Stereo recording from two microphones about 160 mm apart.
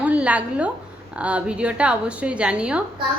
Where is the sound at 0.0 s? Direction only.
10° right (ahead or behind).